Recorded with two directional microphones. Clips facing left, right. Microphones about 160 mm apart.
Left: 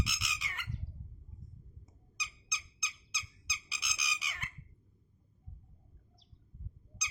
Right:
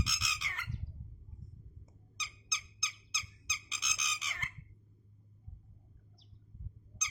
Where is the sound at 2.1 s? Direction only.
10° left (ahead or behind).